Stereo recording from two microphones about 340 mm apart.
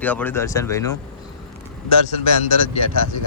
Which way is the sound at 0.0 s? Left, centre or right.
Centre.